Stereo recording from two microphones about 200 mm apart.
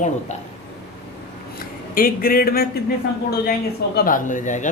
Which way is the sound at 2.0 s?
45° left (ahead or behind).